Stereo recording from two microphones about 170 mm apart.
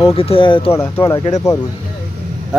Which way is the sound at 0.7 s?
15° left (ahead or behind).